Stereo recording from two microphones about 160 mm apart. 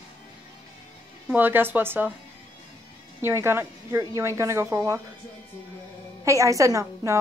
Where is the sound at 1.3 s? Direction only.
10° right (ahead or behind).